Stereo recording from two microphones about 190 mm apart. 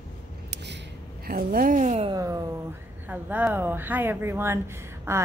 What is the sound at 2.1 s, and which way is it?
A woman's voice, 20° right (ahead or behind).